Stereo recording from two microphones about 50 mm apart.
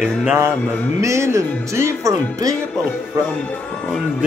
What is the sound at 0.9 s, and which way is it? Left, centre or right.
Speech, right.